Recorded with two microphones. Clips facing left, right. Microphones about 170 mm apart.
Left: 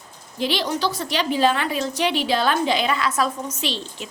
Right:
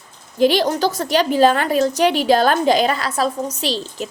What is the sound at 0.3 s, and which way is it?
A woman's voice, 45° right (ahead or behind).